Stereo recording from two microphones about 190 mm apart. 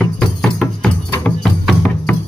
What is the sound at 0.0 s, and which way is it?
Music, 5° left (ahead or behind).